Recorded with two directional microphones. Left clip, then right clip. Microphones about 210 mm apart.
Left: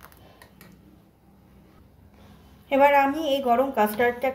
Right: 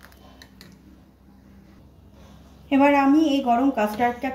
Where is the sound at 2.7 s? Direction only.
45° left (ahead or behind).